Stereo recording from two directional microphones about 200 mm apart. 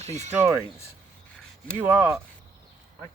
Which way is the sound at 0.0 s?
35° right (ahead or behind).